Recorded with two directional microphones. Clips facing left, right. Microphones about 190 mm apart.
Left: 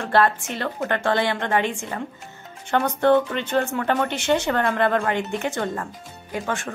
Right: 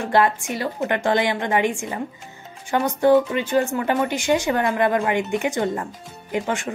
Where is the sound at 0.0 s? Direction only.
15° right (ahead or behind).